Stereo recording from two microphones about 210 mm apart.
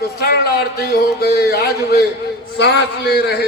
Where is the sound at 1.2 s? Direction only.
50° left (ahead or behind).